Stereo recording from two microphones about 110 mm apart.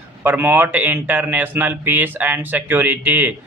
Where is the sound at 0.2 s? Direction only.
20° right (ahead or behind).